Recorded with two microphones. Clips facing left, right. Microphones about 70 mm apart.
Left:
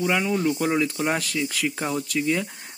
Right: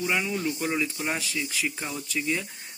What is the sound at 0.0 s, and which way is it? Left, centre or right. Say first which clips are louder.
Speech: left 5 dB; left.